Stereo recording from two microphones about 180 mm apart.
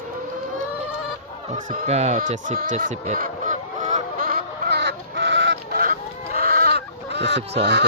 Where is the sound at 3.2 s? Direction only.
45° right (ahead or behind); by 5.8 s 85° right.